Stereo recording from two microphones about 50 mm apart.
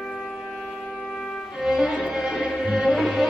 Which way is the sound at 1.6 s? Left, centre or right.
Centre.